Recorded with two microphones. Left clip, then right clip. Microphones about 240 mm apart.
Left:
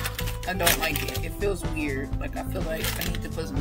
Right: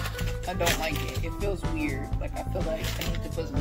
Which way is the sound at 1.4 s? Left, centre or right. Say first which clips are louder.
Left 3 dB; centre.